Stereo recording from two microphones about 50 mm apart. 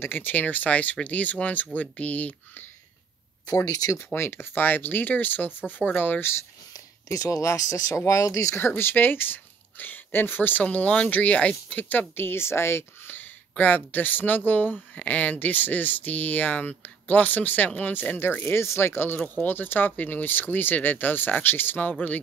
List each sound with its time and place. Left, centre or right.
0.0 s speech: left
4.0 s speech: left
7.1 s speech: left
8.5 s speech: left
10.6 s speech: left
12.2 s speech: left
13.1 s speech: left
18.4 s speech: left